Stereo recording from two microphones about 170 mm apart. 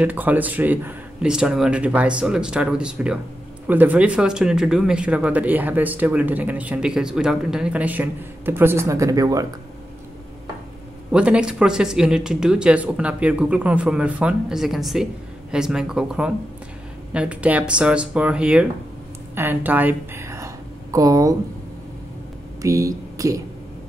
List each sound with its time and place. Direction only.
0.0 s speech: 10° right (ahead or behind)
11.1 s a woman's voice: 5° right (ahead or behind)
22.6 s speech: 20° right (ahead or behind)